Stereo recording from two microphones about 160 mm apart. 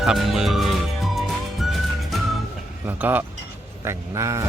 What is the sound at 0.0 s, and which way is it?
Music, centre (ahead or behind).